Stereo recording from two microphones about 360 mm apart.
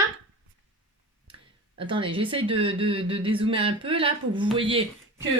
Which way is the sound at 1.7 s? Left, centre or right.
Centre.